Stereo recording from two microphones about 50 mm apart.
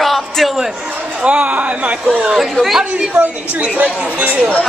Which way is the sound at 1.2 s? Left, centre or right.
Right.